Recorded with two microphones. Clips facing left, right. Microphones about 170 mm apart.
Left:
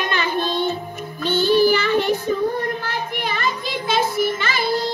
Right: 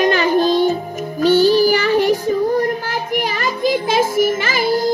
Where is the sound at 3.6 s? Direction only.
45° right (ahead or behind).